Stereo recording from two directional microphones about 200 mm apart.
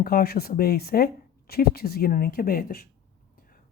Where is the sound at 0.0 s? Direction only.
50° left (ahead or behind).